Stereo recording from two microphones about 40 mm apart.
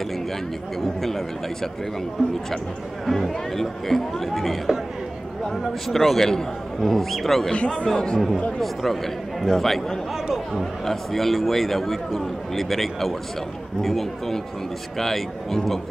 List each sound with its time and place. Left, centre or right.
0.7 s speech: centre
3.1 s speech: centre
5.9 s speech: centre
7.5 s a man's voice: left
8.5 s speech: centre